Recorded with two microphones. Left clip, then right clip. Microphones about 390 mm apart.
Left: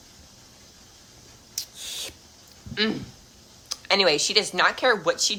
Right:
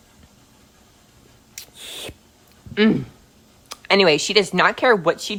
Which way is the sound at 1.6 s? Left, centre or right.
Centre.